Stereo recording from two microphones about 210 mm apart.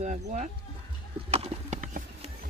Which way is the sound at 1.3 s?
30° right (ahead or behind).